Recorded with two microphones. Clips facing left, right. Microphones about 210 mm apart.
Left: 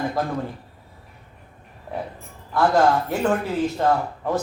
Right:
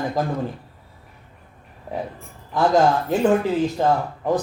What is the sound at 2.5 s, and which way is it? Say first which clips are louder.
A woman's voice: right 1 dB; 20° right (ahead or behind).